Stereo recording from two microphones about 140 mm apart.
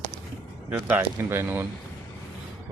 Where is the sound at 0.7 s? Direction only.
10° right (ahead or behind).